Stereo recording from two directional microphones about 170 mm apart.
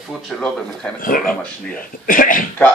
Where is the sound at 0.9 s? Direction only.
55° left (ahead or behind).